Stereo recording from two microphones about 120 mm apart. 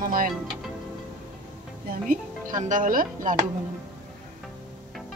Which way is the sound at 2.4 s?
90° right.